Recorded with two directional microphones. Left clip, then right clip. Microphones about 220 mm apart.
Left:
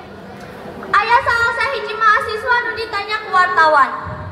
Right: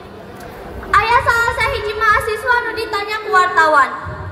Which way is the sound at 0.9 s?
50° right (ahead or behind).